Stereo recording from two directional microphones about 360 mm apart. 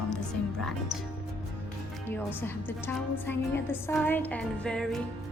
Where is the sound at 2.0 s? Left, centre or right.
Centre.